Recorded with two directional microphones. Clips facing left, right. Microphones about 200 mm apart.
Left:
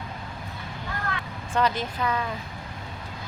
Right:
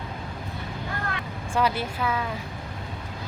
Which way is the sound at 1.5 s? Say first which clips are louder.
Even; 10° right (ahead or behind).